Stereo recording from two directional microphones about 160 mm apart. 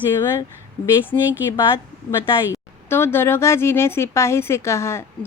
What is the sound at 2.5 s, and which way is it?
Speech, 15° left (ahead or behind).